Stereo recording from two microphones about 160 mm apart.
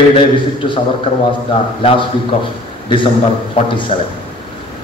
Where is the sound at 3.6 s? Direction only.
30° left (ahead or behind).